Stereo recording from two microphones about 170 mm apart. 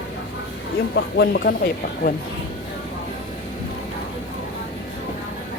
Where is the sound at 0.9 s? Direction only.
80° left.